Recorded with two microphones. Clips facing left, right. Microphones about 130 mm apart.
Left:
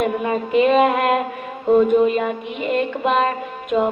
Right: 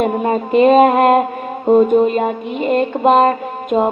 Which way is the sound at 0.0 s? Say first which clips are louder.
Right 4 dB; 40° right (ahead or behind).